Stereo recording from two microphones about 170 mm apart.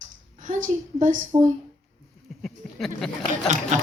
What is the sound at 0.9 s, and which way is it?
Speech, 45° right (ahead or behind).